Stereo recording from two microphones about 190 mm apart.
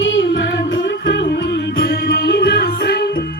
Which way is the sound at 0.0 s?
75° left (ahead or behind).